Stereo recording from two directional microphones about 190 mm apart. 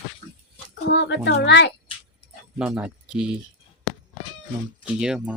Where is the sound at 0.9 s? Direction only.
65° left (ahead or behind).